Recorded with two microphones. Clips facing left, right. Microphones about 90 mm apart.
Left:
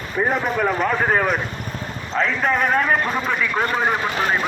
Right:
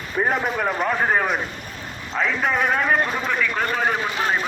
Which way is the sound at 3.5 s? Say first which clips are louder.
Left 2 dB; 25° left (ahead or behind).